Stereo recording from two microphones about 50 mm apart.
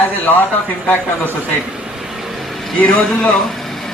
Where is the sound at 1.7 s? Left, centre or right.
Centre.